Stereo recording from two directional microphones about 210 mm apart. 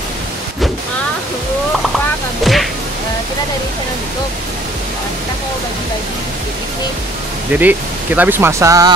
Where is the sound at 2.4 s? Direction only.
Centre (ahead or behind).